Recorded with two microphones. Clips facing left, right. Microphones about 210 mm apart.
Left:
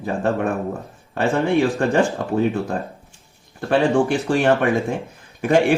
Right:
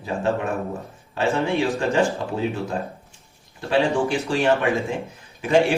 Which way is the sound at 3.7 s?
50° left (ahead or behind).